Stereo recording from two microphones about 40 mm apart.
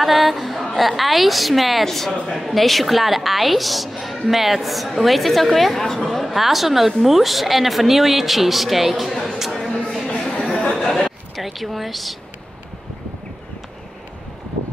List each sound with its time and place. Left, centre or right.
0.0 s a woman's voice: centre
10.5 s chatter: centre
11.1 s speech: centre